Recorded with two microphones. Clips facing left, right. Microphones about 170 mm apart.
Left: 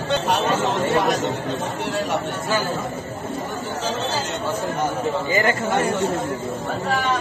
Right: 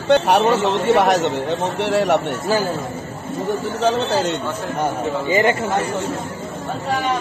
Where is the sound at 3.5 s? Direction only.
65° right (ahead or behind).